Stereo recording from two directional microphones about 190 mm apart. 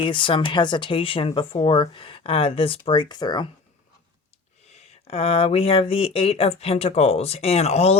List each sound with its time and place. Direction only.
0.0 s speech: 25° left (ahead or behind)
4.6 s speech: 35° left (ahead or behind)